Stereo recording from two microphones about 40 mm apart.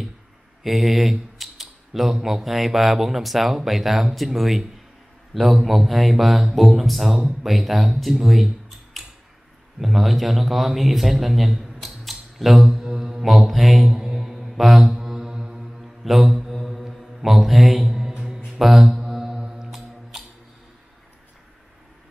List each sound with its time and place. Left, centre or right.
0.7 s typing: centre
2.2 s a man's voice: centre
9.0 s tick-tock: centre
9.8 s a man's voice: centre
13.8 s mantra: centre
14.5 s mantra: centre
14.8 s mantra: centre
16.0 s mantra: centre
17.2 s speech: centre
17.8 s mantra: centre